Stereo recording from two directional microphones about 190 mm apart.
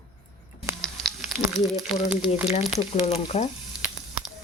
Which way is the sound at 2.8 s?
30° left (ahead or behind).